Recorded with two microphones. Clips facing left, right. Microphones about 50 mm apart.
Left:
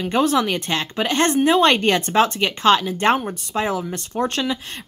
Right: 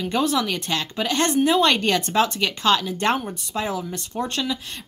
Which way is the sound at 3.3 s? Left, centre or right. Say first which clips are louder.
Left 4 dB; left.